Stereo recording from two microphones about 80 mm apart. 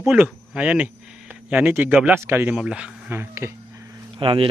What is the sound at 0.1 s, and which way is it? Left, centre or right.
Speech, right.